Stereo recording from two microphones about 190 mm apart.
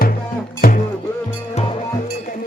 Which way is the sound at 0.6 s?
50° left (ahead or behind).